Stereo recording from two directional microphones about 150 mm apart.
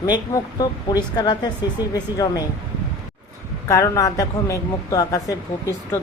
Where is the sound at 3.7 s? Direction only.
20° left (ahead or behind).